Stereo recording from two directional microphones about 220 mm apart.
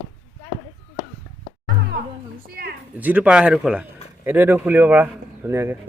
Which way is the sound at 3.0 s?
5° right (ahead or behind).